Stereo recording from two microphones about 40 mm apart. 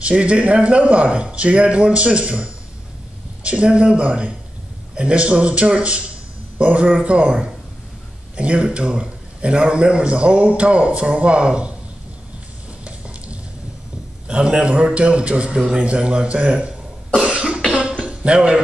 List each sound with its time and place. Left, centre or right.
0.0 s a man's voice: right
8.4 s a man's voice: right
14.2 s a man's voice: right
16.5 s cough: right
17.7 s a sound: right